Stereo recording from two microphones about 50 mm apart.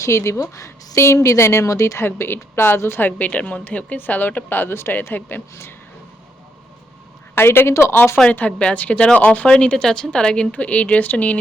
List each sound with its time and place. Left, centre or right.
0.0 s a woman's voice: left
2.0 s a woman's voice: left
3.0 s a woman's voice: left
7.3 s a woman's voice: left
8.3 s a woman's voice: left
9.6 s a woman's voice: centre
10.5 s speech: left